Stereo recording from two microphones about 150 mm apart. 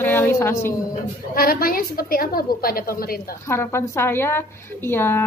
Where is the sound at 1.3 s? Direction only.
80° left.